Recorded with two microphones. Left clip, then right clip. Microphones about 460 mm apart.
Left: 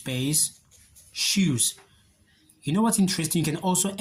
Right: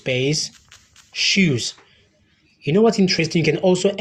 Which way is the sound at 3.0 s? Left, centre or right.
Left.